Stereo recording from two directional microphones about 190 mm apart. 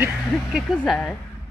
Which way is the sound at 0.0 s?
Centre (ahead or behind).